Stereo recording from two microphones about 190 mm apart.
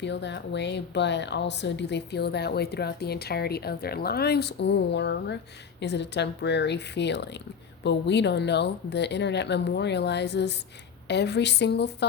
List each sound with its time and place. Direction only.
0.0 s speech: 65° left (ahead or behind)